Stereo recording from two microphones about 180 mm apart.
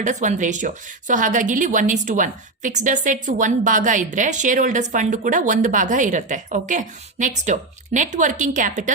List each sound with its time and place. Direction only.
0.0 s speech: 40° right (ahead or behind)